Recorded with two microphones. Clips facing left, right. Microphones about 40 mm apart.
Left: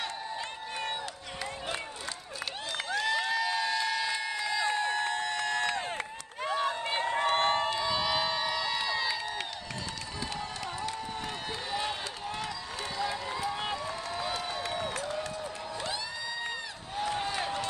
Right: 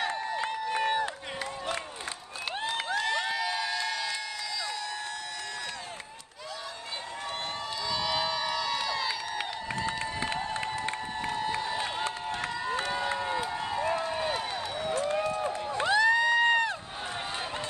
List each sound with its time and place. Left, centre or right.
0.0 s a sound: centre
3.1 s crowd: centre
4.5 s crowd: left
6.5 s run: left
7.8 s crowd: centre
12.7 s run: right
15.0 s crowd: right